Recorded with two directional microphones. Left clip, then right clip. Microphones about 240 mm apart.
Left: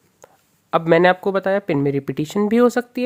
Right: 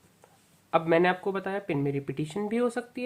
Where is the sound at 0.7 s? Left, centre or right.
Left.